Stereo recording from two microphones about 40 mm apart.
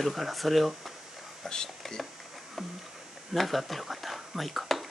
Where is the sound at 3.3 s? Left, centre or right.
Centre.